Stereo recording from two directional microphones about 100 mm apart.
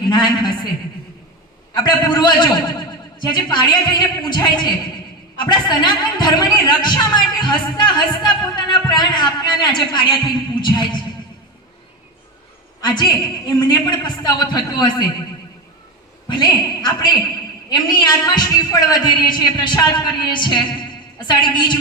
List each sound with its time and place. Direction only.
0.1 s a woman's voice: 45° left (ahead or behind)
1.7 s a woman's voice: 45° left (ahead or behind)
12.8 s a woman's voice: 45° left (ahead or behind)
16.3 s a woman's voice: 45° left (ahead or behind)